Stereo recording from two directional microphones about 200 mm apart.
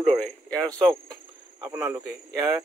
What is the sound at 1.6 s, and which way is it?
Speech, 15° right (ahead or behind).